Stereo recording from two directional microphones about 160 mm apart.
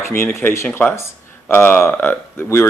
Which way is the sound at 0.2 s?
15° left (ahead or behind).